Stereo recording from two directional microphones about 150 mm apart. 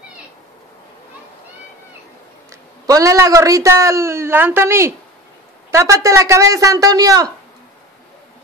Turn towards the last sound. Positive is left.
turn(degrees=-25)  # may be behind; listen again after turning